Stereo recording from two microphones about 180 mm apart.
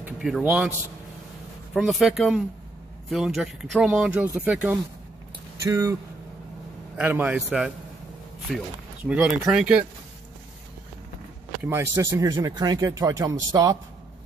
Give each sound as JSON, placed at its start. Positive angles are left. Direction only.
{"t": 0.0, "sound": "speech", "side_deg": -5}
{"t": 7.0, "sound": "speech", "side_deg": -10}
{"t": 11.6, "sound": "speech", "side_deg": -15}